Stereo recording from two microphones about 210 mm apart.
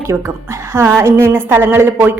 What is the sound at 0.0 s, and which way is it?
A woman's voice, 15° right (ahead or behind).